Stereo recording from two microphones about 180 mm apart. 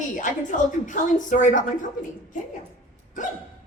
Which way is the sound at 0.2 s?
45° left (ahead or behind).